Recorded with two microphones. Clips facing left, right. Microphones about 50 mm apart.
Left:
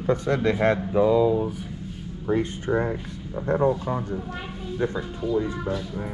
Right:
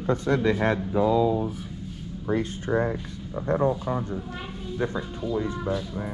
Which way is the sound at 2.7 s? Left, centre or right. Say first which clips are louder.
Even; centre.